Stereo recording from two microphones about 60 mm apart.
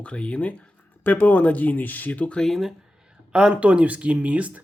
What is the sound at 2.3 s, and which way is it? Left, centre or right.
Speech, centre.